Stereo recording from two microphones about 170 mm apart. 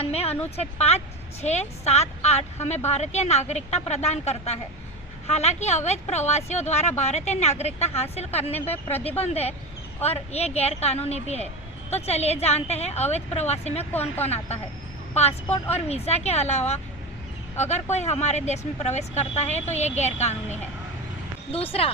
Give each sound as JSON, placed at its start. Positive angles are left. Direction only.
{"t": 0.0, "sound": "a woman's voice", "side_deg": 35}
{"t": 8.5, "sound": "speech", "side_deg": 10}
{"t": 9.0, "sound": "a woman's voice", "side_deg": 35}